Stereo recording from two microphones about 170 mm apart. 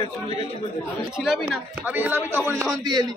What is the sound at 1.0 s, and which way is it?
Speech, centre (ahead or behind).